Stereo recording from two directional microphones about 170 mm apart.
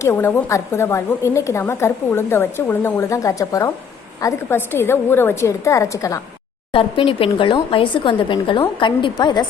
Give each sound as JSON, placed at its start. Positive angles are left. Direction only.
{"t": 0.0, "sound": "a woman's voice", "side_deg": 15}
{"t": 6.7, "sound": "speech", "side_deg": 30}